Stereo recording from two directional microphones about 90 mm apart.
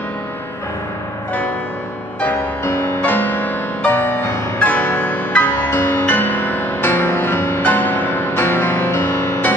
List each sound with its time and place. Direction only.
2.6 s music: 25° left (ahead or behind)